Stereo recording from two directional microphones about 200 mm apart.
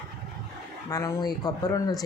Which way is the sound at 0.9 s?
15° left (ahead or behind).